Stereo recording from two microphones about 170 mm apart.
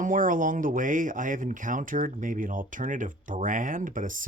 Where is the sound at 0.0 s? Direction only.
50° right (ahead or behind).